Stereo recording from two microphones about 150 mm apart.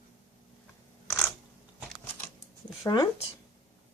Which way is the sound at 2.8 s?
30° left (ahead or behind).